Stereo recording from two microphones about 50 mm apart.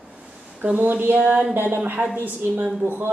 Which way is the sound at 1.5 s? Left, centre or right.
Right.